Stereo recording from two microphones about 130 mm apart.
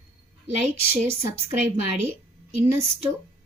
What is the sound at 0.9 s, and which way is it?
Speech, 50° right (ahead or behind).